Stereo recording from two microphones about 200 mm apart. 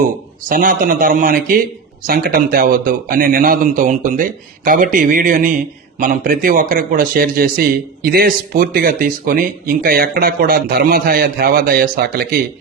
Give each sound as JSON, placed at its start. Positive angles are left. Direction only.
{"t": 0.4, "sound": "a man's voice", "side_deg": -45}